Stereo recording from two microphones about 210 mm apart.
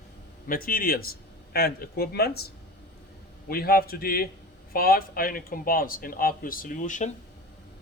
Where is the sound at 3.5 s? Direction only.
45° left (ahead or behind).